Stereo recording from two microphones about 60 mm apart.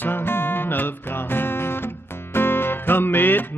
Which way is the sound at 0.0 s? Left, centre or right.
Left.